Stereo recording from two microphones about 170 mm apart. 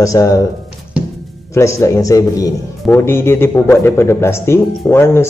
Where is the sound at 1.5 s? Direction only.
15° left (ahead or behind).